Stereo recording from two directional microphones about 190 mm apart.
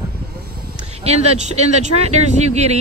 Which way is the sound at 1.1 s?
35° right (ahead or behind).